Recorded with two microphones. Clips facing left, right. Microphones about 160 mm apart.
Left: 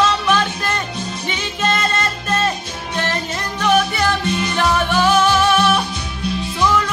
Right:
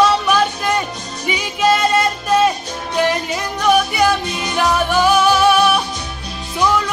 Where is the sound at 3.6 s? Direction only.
10° right (ahead or behind).